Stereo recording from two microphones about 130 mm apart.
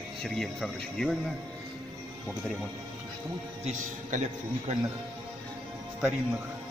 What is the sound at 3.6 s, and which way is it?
Speech, 65° right (ahead or behind).